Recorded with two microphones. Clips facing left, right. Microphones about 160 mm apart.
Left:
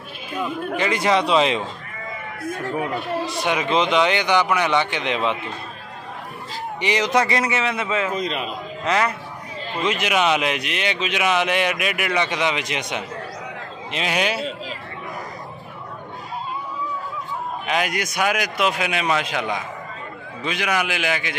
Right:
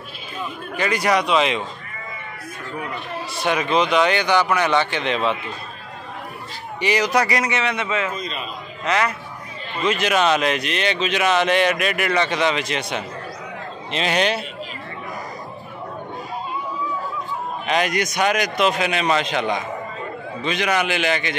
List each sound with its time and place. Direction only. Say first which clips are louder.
0.7 s speech: even; 20° left (ahead or behind)
2.7 s speech: left 4 dB; 20° left (ahead or behind)
6.8 s speech: right 1 dB; 20° left (ahead or behind)
8.2 s a man's voice: left 5 dB; 70° left (ahead or behind)
9.8 s speech: right 2 dB; 15° left (ahead or behind)
17.6 s speech: right 3 dB; 10° left (ahead or behind)